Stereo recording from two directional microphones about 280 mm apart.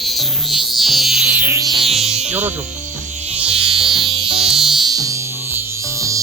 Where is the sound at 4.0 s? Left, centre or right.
Centre.